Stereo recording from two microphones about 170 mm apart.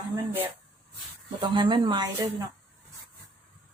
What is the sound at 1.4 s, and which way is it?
Speech, 30° right (ahead or behind).